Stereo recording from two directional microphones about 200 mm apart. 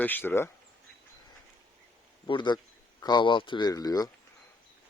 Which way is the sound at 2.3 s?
20° left (ahead or behind).